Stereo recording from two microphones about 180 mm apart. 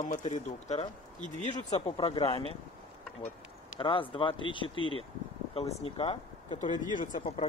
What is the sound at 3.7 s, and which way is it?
Speech, 30° left (ahead or behind).